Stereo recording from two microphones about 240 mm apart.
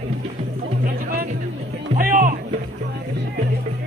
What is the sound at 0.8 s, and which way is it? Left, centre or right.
Music, right.